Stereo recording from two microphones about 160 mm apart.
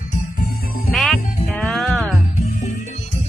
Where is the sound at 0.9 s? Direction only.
Centre (ahead or behind).